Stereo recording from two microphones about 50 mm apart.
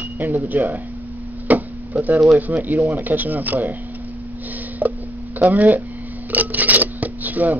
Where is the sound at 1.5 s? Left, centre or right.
Right.